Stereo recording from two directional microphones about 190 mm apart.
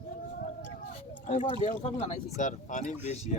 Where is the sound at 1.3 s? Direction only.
35° left (ahead or behind).